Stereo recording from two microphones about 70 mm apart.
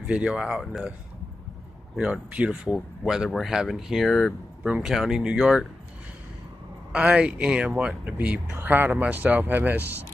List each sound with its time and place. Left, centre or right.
0.0 s speech: centre
2.3 s speech: centre
3.3 s speech: centre
4.6 s speech: centre
6.9 s speech: centre